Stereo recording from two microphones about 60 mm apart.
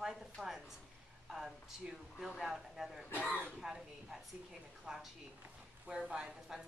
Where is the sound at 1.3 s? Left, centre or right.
Centre.